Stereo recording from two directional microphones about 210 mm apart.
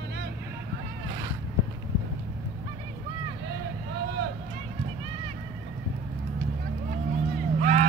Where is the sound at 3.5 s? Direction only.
50° right (ahead or behind).